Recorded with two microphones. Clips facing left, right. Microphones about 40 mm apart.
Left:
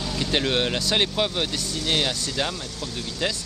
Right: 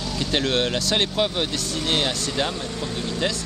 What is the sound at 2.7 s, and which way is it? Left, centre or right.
Speech, right.